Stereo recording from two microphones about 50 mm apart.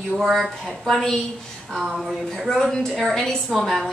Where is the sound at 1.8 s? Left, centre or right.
Centre.